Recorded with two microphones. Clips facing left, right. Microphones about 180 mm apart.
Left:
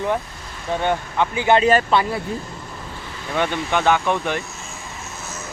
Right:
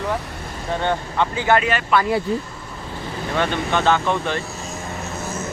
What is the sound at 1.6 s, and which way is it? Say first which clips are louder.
Speech: left 6 dB; 40° left (ahead or behind).